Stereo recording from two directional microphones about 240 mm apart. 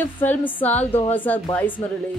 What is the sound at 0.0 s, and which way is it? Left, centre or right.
Speech, centre.